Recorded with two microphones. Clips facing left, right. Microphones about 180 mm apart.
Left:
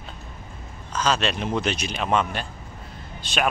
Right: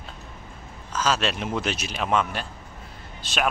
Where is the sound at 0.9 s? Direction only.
5° right (ahead or behind).